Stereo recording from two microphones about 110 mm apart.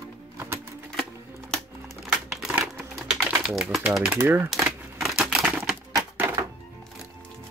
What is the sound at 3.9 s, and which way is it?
Speech, 10° right (ahead or behind).